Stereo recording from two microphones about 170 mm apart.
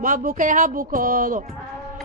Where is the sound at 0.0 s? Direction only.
55° right (ahead or behind).